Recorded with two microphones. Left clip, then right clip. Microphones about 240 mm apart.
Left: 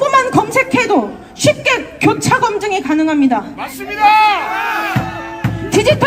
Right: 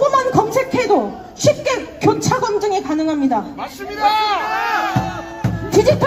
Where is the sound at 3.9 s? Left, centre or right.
Left.